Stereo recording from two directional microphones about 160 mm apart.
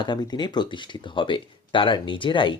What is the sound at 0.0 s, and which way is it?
Speech, 25° left (ahead or behind).